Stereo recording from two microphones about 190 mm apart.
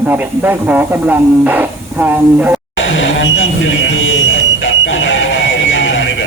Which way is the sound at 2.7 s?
80° left.